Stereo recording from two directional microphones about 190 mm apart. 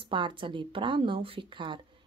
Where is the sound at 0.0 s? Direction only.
25° right (ahead or behind).